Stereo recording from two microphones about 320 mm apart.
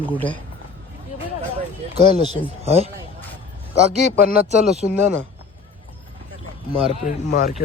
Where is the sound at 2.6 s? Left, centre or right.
Centre.